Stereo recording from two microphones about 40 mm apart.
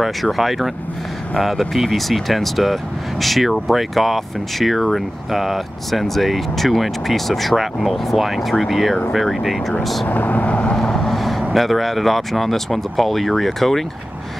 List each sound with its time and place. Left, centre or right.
0.0 s speech: centre
10.0 s speech: left
10.8 s vehicle: centre
11.5 s speech: centre